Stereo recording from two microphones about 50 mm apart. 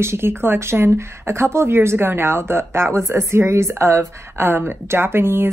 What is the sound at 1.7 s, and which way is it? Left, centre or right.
Speech, right.